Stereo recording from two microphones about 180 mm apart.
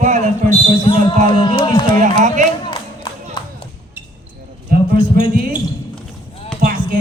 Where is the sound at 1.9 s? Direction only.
45° right (ahead or behind).